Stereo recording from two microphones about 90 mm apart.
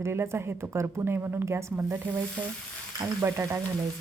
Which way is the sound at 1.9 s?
20° right (ahead or behind).